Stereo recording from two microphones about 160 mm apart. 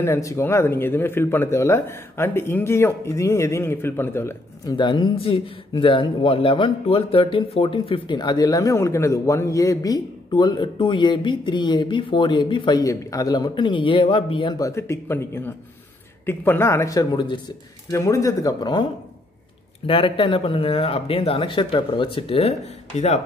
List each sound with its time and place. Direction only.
0.0 s speech: 20° left (ahead or behind)
4.7 s speech: 30° left (ahead or behind)
19.9 s speech: 35° left (ahead or behind)